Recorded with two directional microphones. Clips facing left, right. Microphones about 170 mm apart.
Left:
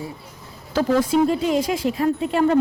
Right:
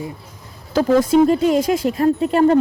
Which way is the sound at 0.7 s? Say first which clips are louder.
Right 4 dB; 40° right (ahead or behind).